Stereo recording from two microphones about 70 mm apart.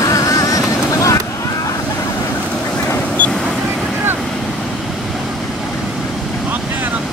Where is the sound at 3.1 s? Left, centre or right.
Centre.